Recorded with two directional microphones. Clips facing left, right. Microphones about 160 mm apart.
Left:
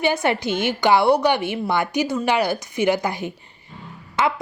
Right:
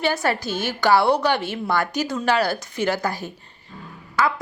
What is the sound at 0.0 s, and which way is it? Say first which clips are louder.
A woman's voice: left 2 dB; 20° left (ahead or behind).